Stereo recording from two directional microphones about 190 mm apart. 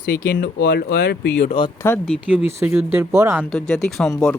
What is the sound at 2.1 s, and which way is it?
Speech, 10° right (ahead or behind).